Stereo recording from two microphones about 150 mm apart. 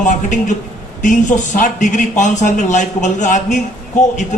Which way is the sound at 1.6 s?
55° left (ahead or behind).